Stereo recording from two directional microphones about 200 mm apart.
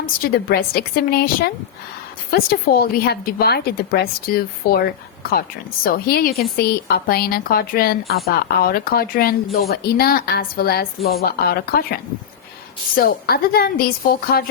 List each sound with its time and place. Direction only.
0.0 s a woman's voice: 50° left (ahead or behind)
13.0 s a woman's voice: 50° left (ahead or behind)